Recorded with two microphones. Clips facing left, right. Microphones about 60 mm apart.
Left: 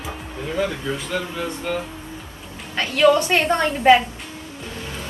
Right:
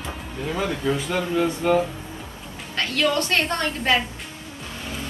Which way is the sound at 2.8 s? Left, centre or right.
Centre.